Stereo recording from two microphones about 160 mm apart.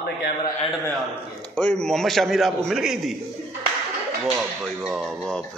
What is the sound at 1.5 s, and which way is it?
A man's voice, 5° left (ahead or behind).